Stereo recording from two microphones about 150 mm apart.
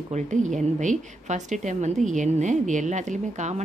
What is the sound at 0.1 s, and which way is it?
A woman's voice, 55° right (ahead or behind).